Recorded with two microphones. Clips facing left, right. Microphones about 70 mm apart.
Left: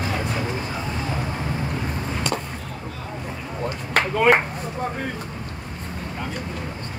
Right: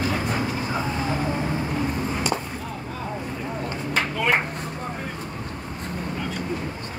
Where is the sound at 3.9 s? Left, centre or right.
Left.